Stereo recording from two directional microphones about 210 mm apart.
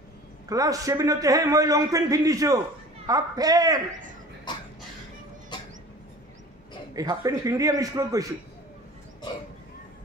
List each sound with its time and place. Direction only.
0.5 s a man's voice: 15° right (ahead or behind)
7.0 s a man's voice: 15° right (ahead or behind)